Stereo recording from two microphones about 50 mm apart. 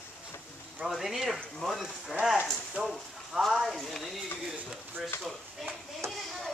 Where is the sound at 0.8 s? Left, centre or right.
Centre.